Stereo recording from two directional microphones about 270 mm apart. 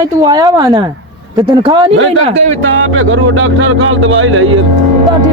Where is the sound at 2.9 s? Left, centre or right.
Right.